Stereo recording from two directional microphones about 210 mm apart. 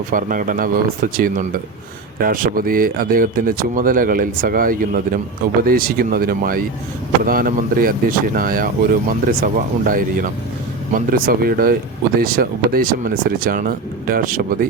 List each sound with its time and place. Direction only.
0.1 s speech: 40° right (ahead or behind)